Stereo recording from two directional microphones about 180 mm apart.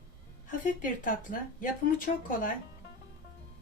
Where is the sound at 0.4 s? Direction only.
45° left (ahead or behind).